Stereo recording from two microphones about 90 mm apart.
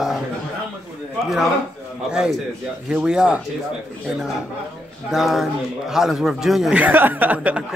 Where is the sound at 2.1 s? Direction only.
10° right (ahead or behind).